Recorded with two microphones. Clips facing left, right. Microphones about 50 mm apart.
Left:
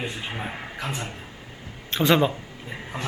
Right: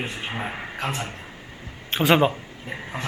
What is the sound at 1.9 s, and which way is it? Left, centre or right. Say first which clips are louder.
Speech: right 1 dB; right.